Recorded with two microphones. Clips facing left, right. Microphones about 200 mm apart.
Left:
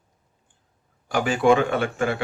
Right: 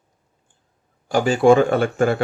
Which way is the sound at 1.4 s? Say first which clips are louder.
Right 5 dB; 40° right (ahead or behind).